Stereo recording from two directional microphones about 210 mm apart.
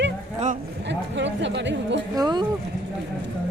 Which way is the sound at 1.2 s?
60° right (ahead or behind).